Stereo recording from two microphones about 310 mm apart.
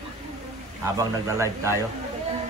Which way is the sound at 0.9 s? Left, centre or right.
Centre.